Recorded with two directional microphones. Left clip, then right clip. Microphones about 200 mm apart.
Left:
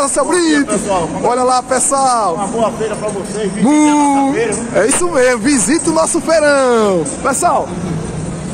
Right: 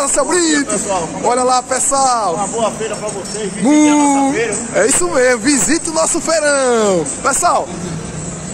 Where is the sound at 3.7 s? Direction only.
10° left (ahead or behind).